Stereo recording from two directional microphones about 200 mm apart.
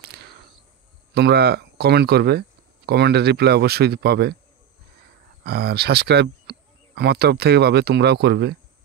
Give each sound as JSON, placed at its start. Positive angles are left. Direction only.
{"t": 0.1, "sound": "a sound", "side_deg": -55}
{"t": 1.1, "sound": "speech", "side_deg": -55}
{"t": 5.4, "sound": "speech", "side_deg": -55}